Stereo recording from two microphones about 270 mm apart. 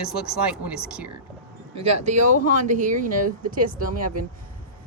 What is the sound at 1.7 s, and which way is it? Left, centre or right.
Speech, right.